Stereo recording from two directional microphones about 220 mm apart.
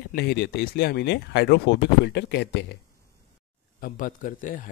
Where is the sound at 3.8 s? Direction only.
40° left (ahead or behind).